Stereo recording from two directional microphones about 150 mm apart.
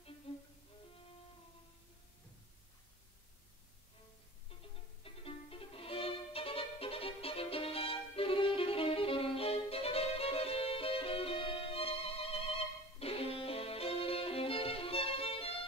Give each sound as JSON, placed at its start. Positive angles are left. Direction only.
{"t": 0.3, "sound": "music", "side_deg": 40}
{"t": 5.0, "sound": "violin", "side_deg": 40}
{"t": 13.0, "sound": "music", "side_deg": 40}